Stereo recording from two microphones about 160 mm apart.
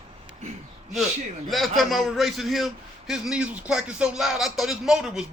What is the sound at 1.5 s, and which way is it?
A man's voice, centre (ahead or behind).